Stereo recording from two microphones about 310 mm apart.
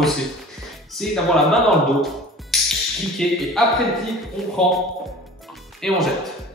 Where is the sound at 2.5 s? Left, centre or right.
Centre.